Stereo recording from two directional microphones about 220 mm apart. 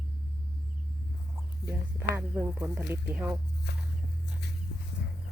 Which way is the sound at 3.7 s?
50° left (ahead or behind).